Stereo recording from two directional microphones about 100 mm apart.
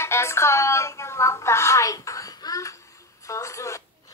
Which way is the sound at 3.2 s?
30° left (ahead or behind).